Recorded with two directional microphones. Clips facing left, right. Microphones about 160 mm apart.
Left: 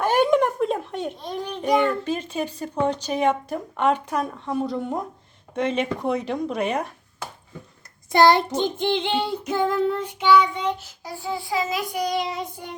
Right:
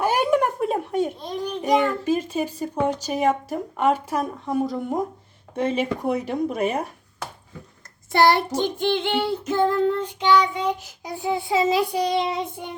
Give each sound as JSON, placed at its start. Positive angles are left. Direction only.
{"t": 0.0, "sound": "a sound", "side_deg": -10}
{"t": 1.6, "sound": "speech", "side_deg": -10}
{"t": 8.1, "sound": "child singing", "side_deg": 20}
{"t": 10.6, "sound": "child singing", "side_deg": -10}